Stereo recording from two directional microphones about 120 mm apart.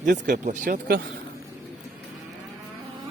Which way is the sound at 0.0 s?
90° right.